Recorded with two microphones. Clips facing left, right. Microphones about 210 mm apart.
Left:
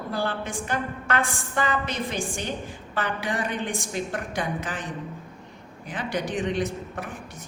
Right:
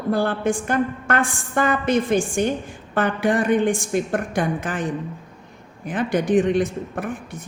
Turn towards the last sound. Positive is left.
turn(degrees=-50)  # may be behind; listen again after turning